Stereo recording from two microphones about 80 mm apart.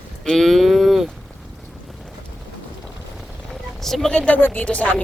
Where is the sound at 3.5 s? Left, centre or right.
Centre.